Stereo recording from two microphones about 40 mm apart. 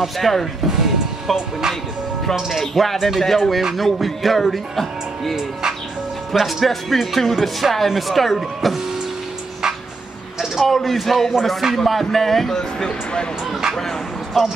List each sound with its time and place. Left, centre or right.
0.0 s speech: centre
0.7 s music: centre
2.6 s speech: centre
5.3 s speech: centre
6.3 s speech: centre
10.6 s speech: centre
12.5 s speech: centre
13.5 s speech: centre